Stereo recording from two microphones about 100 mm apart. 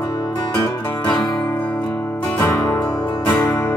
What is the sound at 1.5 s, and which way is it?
Music, 20° left (ahead or behind).